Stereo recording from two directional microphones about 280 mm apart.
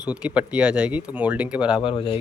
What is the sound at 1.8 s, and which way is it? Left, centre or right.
Speech, centre.